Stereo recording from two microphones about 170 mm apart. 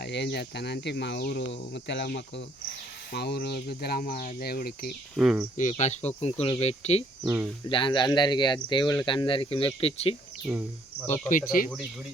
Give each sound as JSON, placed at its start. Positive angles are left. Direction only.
{"t": 0.0, "sound": "speech", "side_deg": 85}
{"t": 3.1, "sound": "speech", "side_deg": 75}
{"t": 5.1, "sound": "speech", "side_deg": -5}
{"t": 5.5, "sound": "speech", "side_deg": 40}
{"t": 7.3, "sound": "speech", "side_deg": -15}
{"t": 7.7, "sound": "speech", "side_deg": 30}
{"t": 10.4, "sound": "speech", "side_deg": -10}
{"t": 11.3, "sound": "speech", "side_deg": 50}